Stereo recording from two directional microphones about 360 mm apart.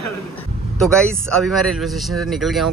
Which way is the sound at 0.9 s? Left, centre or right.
Centre.